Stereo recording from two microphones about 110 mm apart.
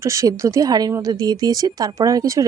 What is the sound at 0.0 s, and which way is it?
Speech, 30° right (ahead or behind).